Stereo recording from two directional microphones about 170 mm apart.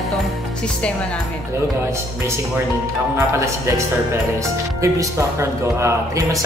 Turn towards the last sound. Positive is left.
turn(degrees=-15)  # may be behind; listen again after turning